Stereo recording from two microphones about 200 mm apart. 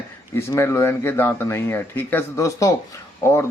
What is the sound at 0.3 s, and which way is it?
Speech, 15° left (ahead or behind).